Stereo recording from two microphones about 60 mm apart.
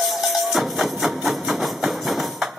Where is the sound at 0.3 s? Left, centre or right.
Centre.